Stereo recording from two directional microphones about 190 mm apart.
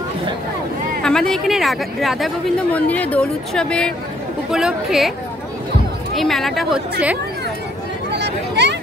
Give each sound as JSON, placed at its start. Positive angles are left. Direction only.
{"t": 1.0, "sound": "speech", "side_deg": 5}
{"t": 6.1, "sound": "speech", "side_deg": 0}
{"t": 8.1, "sound": "a sound", "side_deg": -65}